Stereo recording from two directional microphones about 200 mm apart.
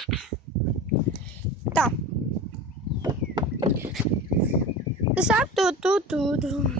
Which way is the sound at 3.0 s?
20° right (ahead or behind).